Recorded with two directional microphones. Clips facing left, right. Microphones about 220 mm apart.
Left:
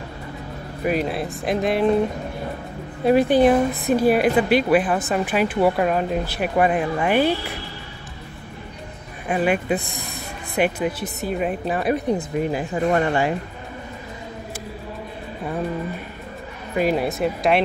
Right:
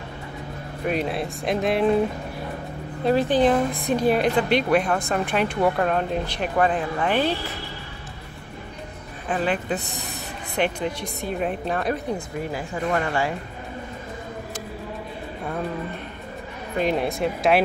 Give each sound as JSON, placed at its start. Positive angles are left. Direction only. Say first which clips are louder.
{"t": 0.8, "sound": "speech", "louder": "left 2 dB", "side_deg": 0}
{"t": 3.1, "sound": "a woman's voice", "louder": "left 4 dB", "side_deg": 10}
{"t": 9.3, "sound": "a woman's voice", "louder": "left 4 dB", "side_deg": 10}
{"t": 12.2, "sound": "speech", "louder": "left 6 dB", "side_deg": 20}
{"t": 16.7, "sound": "speech", "louder": "left 2 dB", "side_deg": 5}